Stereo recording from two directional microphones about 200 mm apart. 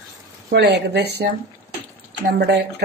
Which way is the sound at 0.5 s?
55° right (ahead or behind).